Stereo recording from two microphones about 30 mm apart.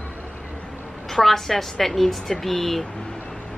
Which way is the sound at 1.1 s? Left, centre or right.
Centre.